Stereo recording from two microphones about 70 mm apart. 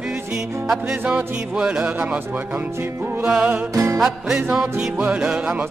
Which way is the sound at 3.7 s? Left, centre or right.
Right.